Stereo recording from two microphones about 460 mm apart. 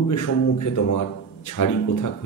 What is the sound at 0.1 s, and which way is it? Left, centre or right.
A man's voice, left.